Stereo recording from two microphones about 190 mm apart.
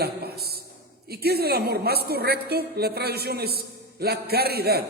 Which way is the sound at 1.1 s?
55° right (ahead or behind).